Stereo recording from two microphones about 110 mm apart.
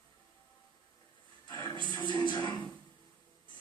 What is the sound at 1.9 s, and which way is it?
Music, 45° left (ahead or behind).